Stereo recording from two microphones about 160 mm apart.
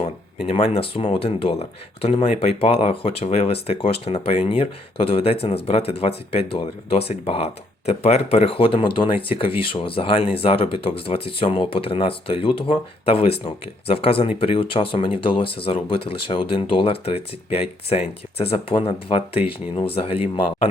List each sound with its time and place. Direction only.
0.4 s speech: 40° left (ahead or behind)